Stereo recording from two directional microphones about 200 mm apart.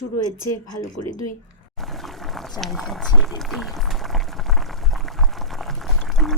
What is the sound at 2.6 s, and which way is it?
Boiling, centre (ahead or behind).